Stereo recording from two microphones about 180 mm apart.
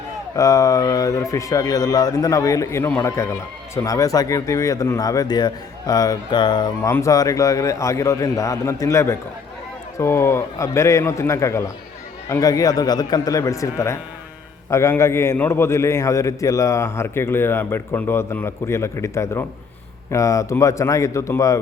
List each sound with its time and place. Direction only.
0.3 s a man's voice: 20° left (ahead or behind)